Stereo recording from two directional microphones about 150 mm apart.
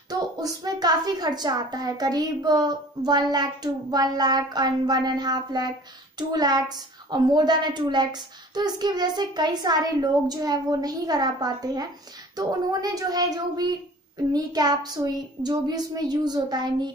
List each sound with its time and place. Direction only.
0.1 s a woman's voice: 25° right (ahead or behind)